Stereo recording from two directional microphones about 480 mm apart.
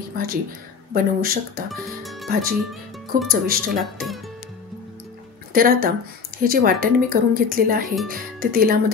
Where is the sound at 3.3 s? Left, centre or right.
Centre.